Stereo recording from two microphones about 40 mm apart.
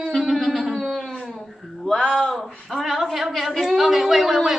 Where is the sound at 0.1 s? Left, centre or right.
Centre.